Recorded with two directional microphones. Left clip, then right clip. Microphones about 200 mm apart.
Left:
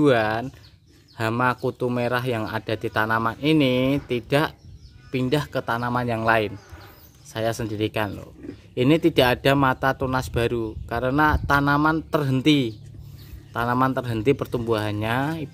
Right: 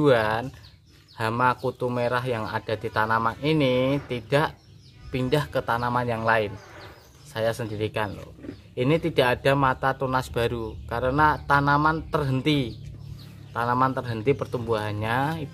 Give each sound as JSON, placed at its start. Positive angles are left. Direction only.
{"t": 0.0, "sound": "speech", "side_deg": 30}